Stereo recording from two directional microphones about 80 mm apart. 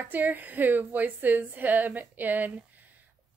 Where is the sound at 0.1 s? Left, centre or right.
Right.